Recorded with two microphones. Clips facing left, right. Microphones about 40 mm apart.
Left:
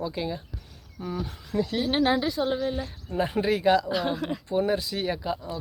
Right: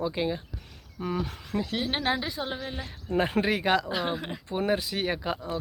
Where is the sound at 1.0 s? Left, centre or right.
Right.